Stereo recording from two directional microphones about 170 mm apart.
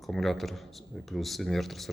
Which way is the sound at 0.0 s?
Centre (ahead or behind).